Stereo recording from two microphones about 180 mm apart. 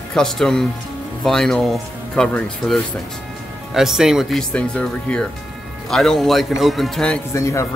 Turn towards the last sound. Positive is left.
turn(degrees=15)  # may be behind; listen again after turning